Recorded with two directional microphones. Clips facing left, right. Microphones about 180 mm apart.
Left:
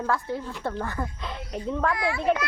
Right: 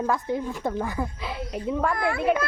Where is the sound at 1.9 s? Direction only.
55° right (ahead or behind).